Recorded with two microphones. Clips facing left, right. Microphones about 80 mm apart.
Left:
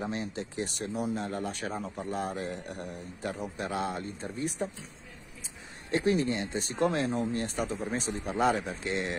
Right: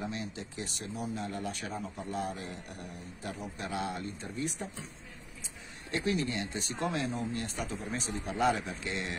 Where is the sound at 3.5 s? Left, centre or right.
Left.